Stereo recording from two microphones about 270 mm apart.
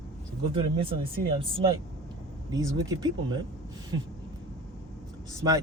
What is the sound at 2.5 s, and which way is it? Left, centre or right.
Speech, centre.